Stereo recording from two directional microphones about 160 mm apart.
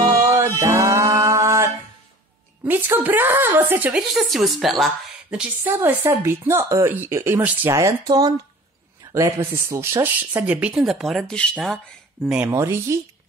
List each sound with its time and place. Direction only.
0.6 s music: 20° right (ahead or behind)
2.6 s speech: 10° right (ahead or behind)